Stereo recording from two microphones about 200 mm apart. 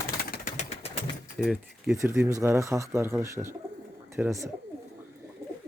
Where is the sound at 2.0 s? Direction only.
10° right (ahead or behind).